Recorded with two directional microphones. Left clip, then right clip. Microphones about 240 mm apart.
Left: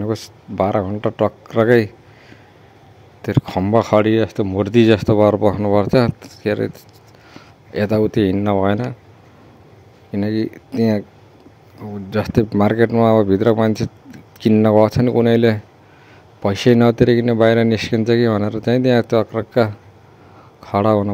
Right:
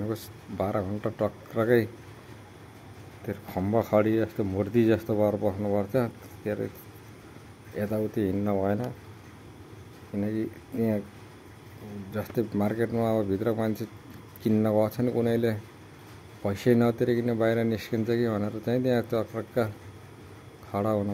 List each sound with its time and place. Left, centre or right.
0.0 s speech: left
3.3 s speech: left
7.7 s speech: left
10.1 s speech: left
12.1 s speech: left